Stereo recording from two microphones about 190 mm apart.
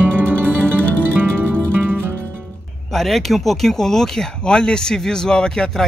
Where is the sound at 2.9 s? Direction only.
Centre (ahead or behind).